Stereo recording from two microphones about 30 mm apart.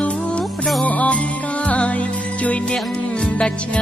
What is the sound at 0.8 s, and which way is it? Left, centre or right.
Music, left.